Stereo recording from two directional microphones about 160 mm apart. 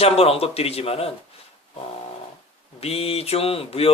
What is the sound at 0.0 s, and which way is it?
Speech, 40° left (ahead or behind).